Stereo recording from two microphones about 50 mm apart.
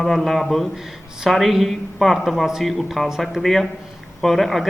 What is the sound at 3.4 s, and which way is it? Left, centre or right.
A man's voice, centre.